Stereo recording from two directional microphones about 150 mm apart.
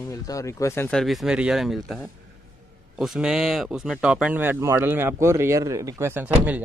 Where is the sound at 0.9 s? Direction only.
Centre (ahead or behind).